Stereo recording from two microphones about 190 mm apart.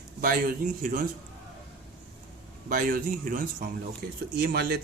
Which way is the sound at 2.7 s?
50° right (ahead or behind).